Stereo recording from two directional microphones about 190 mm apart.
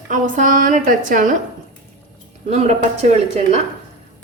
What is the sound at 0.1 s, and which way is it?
A woman's voice, 45° right (ahead or behind).